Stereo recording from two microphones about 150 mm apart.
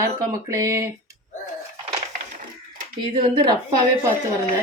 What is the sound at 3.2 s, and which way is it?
Speech, 35° right (ahead or behind).